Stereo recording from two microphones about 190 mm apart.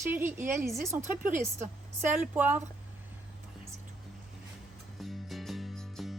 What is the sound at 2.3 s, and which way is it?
Speech, 10° right (ahead or behind).